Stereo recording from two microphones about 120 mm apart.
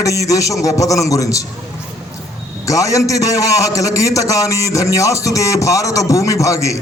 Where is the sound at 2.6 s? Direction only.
25° left (ahead or behind).